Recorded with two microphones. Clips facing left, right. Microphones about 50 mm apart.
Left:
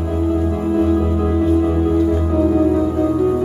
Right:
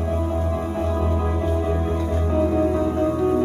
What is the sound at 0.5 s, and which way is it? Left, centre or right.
Music, left.